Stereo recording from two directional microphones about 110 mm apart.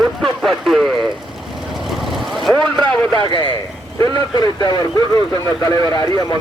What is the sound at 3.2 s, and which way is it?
Speech, 50° left (ahead or behind).